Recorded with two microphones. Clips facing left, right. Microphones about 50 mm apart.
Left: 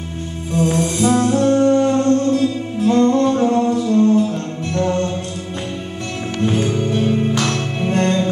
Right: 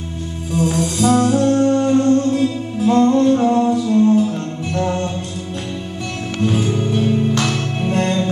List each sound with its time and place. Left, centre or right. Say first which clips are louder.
0.6 s music: left 1 dB; left
1.3 s music: left 1 dB; centre
6.7 s music: even; centre